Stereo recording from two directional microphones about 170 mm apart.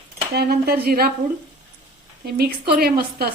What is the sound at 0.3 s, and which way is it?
Speech, 70° right (ahead or behind).